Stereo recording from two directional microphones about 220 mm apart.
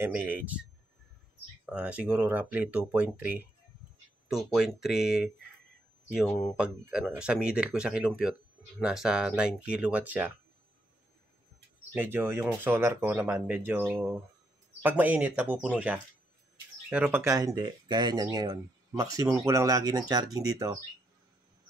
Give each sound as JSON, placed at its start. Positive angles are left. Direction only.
{"t": 0.0, "sound": "speech", "side_deg": -10}
{"t": 1.7, "sound": "speech", "side_deg": -5}
{"t": 6.5, "sound": "speech", "side_deg": -5}
{"t": 11.9, "sound": "speech", "side_deg": -10}